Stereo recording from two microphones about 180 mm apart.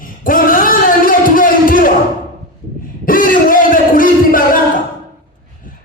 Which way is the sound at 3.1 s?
50° left (ahead or behind).